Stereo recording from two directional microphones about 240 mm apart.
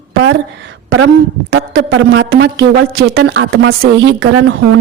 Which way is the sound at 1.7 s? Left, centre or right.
Right.